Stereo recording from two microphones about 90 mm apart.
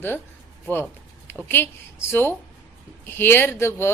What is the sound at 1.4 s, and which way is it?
A woman's voice, 25° left (ahead or behind).